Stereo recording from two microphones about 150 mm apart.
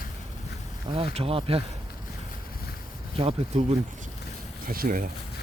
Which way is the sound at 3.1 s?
45° right (ahead or behind).